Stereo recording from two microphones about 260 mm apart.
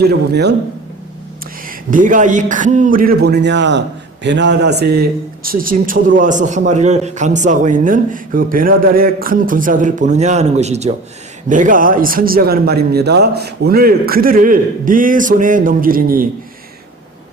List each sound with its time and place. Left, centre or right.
0.0 s speech: right
1.6 s speech: right